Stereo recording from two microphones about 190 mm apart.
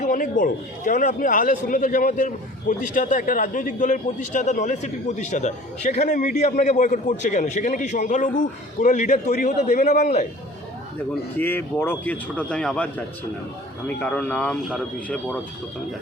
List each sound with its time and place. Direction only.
0.0 s a man's voice: 45° left (ahead or behind)
11.3 s a man's voice: 10° left (ahead or behind)